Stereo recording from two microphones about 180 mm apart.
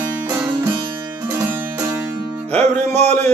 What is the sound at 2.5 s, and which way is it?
Music, 40° right (ahead or behind).